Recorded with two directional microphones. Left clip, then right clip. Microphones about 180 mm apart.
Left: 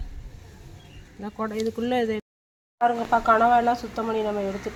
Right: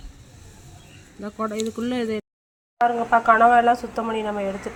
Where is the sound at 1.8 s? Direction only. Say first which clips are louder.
Left 3 dB; 35° left (ahead or behind).